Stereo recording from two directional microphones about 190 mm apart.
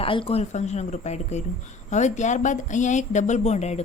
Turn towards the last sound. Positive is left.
turn(degrees=35)  # may be behind; listen again after turning